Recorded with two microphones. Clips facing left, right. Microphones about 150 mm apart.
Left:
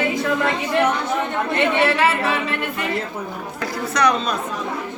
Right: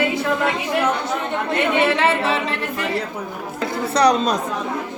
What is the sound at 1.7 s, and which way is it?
Speech, 25° right (ahead or behind).